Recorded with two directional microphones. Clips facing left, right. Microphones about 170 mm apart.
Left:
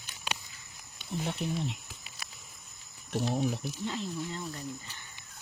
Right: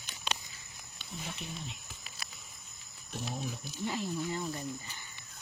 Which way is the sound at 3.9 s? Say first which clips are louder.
Right 1 dB; 10° right (ahead or behind).